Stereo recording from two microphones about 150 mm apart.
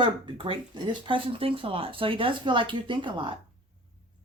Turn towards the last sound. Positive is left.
turn(degrees=-35)  # may be behind; listen again after turning